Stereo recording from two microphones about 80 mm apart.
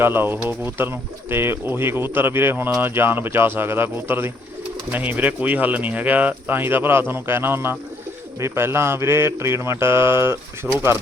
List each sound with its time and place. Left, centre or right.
0.0 s speech: right